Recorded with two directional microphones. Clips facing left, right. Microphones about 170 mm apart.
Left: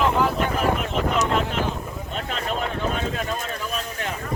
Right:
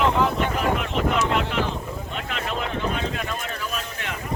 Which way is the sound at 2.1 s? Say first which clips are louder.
Left 3 dB; 40° left (ahead or behind).